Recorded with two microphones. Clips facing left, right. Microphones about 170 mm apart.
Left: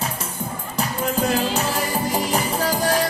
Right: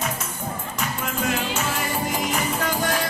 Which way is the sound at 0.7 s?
35° left (ahead or behind).